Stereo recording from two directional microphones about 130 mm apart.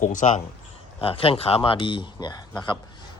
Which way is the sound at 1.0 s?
45° left (ahead or behind).